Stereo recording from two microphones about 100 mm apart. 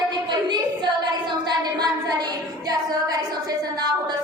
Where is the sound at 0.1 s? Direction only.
45° right (ahead or behind).